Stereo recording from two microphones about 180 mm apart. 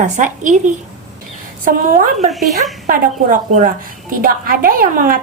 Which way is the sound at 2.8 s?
50° right (ahead or behind).